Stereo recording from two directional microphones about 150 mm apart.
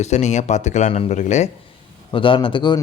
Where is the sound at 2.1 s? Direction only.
35° left (ahead or behind).